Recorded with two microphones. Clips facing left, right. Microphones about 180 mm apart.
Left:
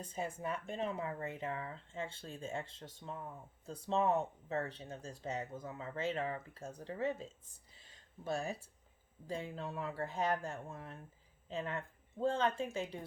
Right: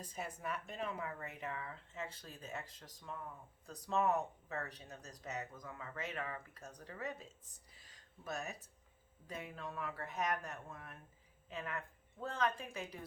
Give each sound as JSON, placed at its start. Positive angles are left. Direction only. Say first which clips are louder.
{"t": 0.0, "sound": "speech", "louder": "left 4 dB", "side_deg": 25}